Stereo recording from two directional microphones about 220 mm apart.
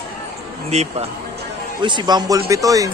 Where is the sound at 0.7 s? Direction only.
30° right (ahead or behind).